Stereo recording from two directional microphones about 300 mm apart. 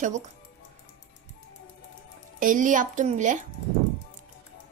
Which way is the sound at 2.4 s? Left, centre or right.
Right.